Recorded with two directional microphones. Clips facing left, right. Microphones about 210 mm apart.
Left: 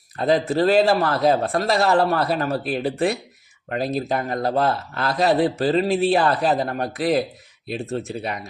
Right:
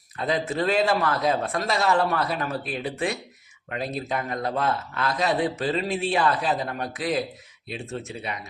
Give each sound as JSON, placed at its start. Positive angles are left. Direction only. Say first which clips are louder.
{"t": 0.2, "sound": "speech", "louder": "left 7 dB", "side_deg": 35}